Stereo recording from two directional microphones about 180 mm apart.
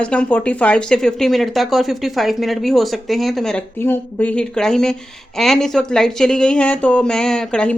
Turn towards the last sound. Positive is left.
turn(degrees=5)  # may be behind; listen again after turning